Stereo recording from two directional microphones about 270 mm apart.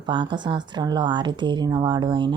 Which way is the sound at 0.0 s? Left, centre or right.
Centre.